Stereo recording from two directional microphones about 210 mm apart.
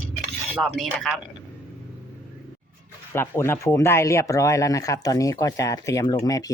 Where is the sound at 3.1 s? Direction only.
10° left (ahead or behind).